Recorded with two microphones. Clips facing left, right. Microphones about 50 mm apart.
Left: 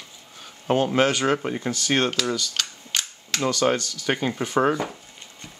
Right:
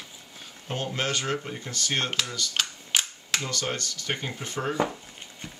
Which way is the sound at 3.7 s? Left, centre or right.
Left.